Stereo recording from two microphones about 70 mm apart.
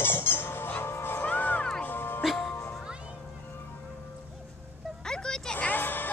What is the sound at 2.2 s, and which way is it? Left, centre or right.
Music, centre.